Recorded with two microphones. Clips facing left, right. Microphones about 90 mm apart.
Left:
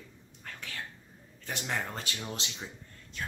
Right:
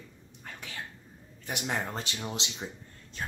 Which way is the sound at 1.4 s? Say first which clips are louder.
Right 2 dB; 15° right (ahead or behind).